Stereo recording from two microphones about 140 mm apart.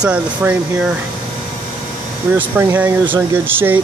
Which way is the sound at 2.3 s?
15° right (ahead or behind).